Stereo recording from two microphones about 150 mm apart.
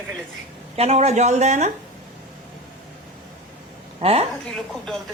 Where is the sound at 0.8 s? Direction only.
45° right (ahead or behind).